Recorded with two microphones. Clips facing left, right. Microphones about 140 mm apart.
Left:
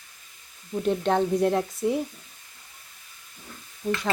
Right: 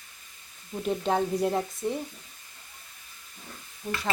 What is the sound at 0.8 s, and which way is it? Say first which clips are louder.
Speech: left 3 dB; 5° right (ahead or behind).